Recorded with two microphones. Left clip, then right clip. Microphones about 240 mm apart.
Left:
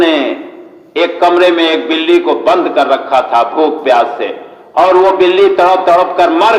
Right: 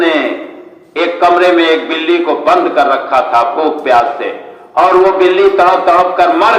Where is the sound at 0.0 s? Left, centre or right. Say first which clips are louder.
Left 1 dB; left.